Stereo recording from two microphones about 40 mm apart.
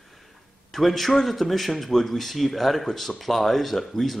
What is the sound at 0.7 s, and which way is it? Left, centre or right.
Speech, centre.